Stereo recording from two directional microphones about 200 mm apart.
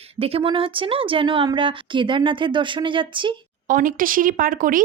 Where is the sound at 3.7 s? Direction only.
45° right (ahead or behind).